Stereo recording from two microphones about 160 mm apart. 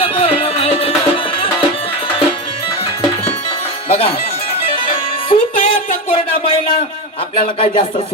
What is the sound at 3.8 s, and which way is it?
Speech, 35° left (ahead or behind).